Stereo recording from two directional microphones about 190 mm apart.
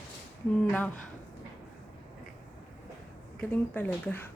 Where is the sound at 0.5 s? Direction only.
5° left (ahead or behind).